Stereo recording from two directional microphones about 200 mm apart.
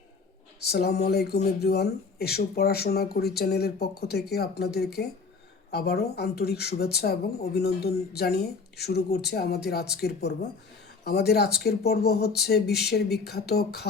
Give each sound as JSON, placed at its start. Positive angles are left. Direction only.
{"t": 0.6, "sound": "speech", "side_deg": 55}